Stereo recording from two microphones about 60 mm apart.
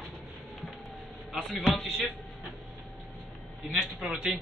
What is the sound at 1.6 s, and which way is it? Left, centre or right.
Speech, centre.